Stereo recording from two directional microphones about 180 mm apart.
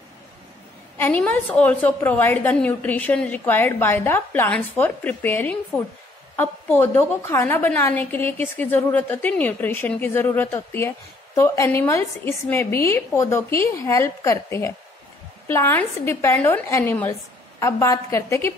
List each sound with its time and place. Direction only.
0.9 s a woman's voice: 10° left (ahead or behind)